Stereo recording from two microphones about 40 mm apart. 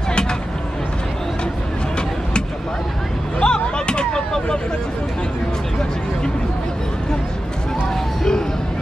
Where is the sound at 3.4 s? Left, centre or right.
Left.